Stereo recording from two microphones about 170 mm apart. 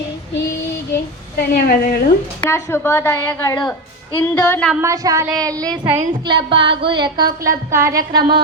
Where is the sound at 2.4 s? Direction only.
15° left (ahead or behind).